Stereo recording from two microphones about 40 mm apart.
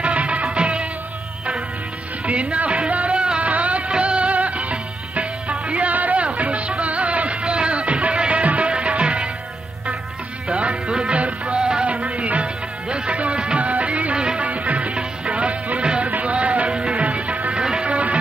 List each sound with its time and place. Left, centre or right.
0.0 s music of bollywood: right
2.2 s music: right
10.5 s music: right
13.6 s music of bollywood: right
14.2 s music of bollywood: right
14.5 s music of bollywood: right
16.1 s music: right